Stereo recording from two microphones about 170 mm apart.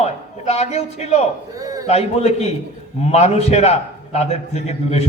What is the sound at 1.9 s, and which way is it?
A man's voice, 40° left (ahead or behind).